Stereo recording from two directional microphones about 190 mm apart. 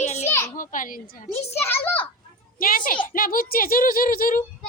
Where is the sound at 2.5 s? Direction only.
50° left (ahead or behind).